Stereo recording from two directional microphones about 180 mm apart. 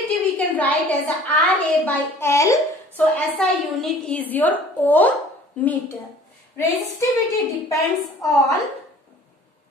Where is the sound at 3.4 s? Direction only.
5° left (ahead or behind).